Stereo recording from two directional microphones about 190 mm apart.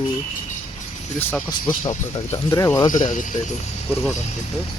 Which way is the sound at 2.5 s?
15° left (ahead or behind).